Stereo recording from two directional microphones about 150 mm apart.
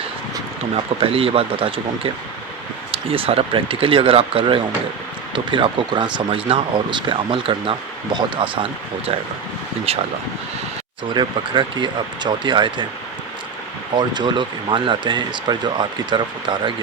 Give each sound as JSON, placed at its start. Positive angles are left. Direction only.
{"t": 0.9, "sound": "speech", "side_deg": -40}
{"t": 9.9, "sound": "speech", "side_deg": -40}
{"t": 11.1, "sound": "speech", "side_deg": -30}
{"t": 13.9, "sound": "speech", "side_deg": -30}